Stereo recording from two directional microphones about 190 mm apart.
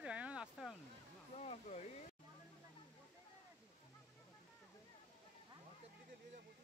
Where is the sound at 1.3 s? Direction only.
35° left (ahead or behind).